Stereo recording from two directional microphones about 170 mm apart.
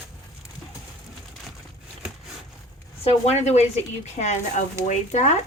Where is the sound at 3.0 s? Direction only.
40° left (ahead or behind).